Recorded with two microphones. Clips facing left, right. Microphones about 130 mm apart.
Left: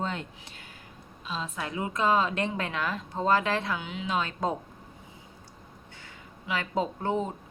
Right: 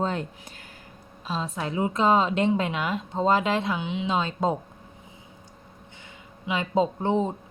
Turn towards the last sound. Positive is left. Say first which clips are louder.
# right 5 dB
turn(degrees=-25)  # may be behind; listen again after turning